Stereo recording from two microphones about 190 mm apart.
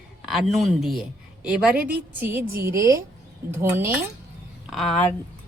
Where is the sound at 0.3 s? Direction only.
Centre (ahead or behind).